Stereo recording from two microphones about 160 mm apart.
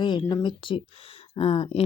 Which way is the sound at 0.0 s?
30° left (ahead or behind).